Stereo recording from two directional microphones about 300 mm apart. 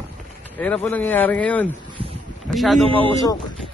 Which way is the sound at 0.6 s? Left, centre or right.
Centre.